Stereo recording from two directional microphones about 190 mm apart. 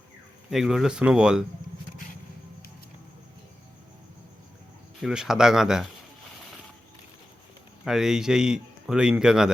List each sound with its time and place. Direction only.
0.5 s speech: centre (ahead or behind)
5.0 s speech: centre (ahead or behind)
7.9 s speech: 5° right (ahead or behind)